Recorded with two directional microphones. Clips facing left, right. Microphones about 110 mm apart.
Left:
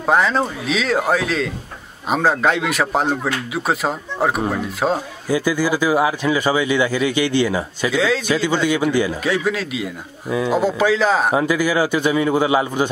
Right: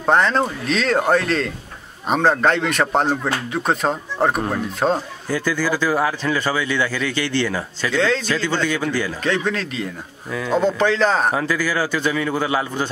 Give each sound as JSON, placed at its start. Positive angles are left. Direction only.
{"t": 0.0, "sound": "speech", "side_deg": 5}